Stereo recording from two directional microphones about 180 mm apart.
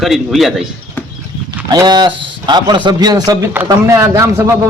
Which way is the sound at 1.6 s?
25° right (ahead or behind).